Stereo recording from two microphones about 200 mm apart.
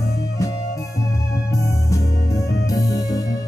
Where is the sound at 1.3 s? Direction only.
15° left (ahead or behind).